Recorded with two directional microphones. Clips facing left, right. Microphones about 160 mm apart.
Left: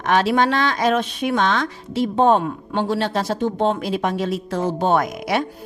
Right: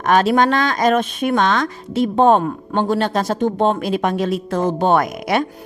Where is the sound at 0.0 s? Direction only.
45° right (ahead or behind).